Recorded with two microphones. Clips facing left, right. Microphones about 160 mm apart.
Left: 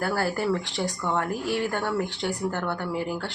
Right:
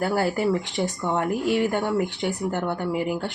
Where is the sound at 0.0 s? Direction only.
20° right (ahead or behind).